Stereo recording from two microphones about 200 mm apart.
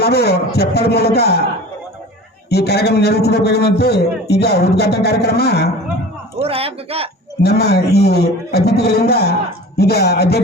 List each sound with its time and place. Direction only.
0.0 s a man's voice: 55° left (ahead or behind)
2.5 s a man's voice: 55° left (ahead or behind)
6.3 s speech: 30° right (ahead or behind)
7.4 s a man's voice: 55° left (ahead or behind)